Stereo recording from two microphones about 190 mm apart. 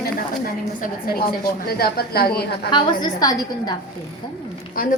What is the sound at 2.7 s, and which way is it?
A woman's voice, 25° left (ahead or behind).